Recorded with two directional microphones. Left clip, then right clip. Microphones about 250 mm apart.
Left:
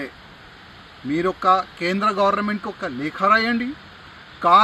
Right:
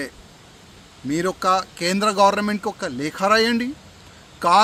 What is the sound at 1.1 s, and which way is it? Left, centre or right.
Speech, right.